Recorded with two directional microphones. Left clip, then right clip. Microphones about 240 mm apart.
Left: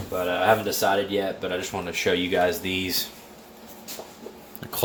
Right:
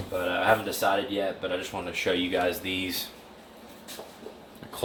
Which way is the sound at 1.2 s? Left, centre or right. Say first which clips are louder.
Left 3 dB; left.